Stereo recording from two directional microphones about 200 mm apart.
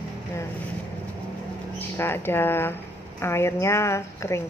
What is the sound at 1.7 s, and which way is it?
Speech, 10° left (ahead or behind).